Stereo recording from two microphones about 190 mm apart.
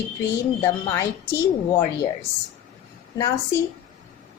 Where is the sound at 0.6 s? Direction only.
15° left (ahead or behind).